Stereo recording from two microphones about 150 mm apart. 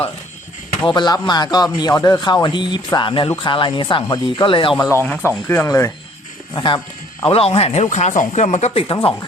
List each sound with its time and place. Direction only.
0.9 s speech: 30° left (ahead or behind)
5.0 s speech: 10° left (ahead or behind)
6.5 s speech: 30° left (ahead or behind)